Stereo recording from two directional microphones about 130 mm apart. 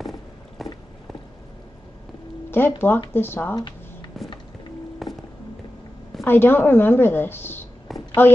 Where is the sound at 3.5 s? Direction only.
30° left (ahead or behind).